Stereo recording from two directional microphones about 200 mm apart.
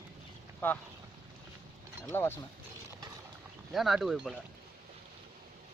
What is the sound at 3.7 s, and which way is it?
Speech, centre (ahead or behind).